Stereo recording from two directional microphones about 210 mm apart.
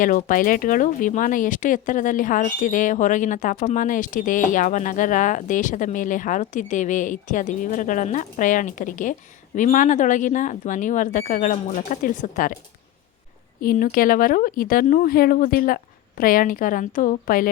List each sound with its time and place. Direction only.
0.0 s speech: 40° left (ahead or behind)
13.6 s speech: 40° left (ahead or behind)